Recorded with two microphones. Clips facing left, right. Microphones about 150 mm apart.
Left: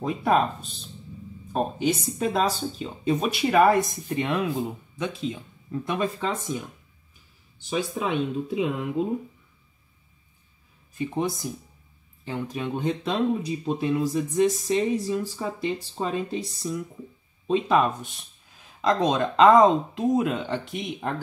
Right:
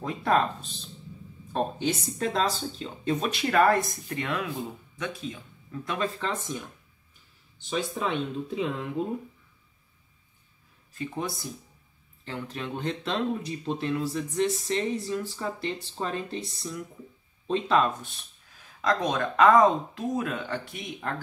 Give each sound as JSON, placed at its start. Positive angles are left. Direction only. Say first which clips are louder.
{"t": 0.0, "sound": "speech", "louder": "left 3 dB", "side_deg": 15}
{"t": 1.5, "sound": "speech", "louder": "left 3 dB", "side_deg": 10}
{"t": 7.7, "sound": "speech", "louder": "left 3 dB", "side_deg": 10}
{"t": 11.0, "sound": "speech", "louder": "left 6 dB", "side_deg": 20}